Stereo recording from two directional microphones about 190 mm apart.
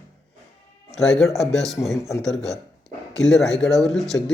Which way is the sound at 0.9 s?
Centre (ahead or behind).